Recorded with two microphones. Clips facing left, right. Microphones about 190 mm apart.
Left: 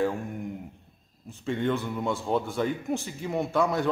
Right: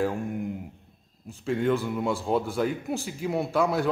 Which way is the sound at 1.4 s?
Centre (ahead or behind).